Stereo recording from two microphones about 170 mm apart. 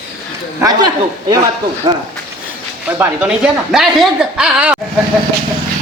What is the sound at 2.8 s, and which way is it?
A woman's voice, 10° right (ahead or behind).